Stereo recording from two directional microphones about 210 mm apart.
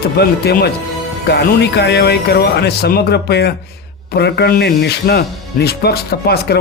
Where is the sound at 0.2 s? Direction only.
50° left (ahead or behind).